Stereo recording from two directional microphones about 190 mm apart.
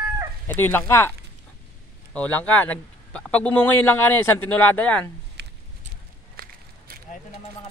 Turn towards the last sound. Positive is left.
turn(degrees=-55)  # may be behind; listen again after turning